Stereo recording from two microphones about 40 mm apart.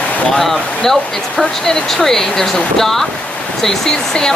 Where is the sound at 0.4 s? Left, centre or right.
Centre.